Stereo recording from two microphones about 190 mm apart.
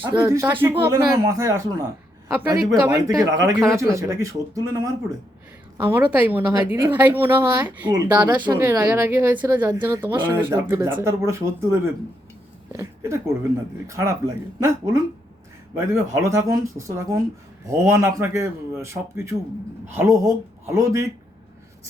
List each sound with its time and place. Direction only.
0.0 s speech: 25° right (ahead or behind)